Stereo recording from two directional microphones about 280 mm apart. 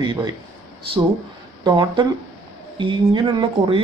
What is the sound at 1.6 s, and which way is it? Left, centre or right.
Speech, centre.